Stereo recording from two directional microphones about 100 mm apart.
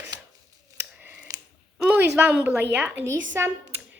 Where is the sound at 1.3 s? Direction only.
35° right (ahead or behind).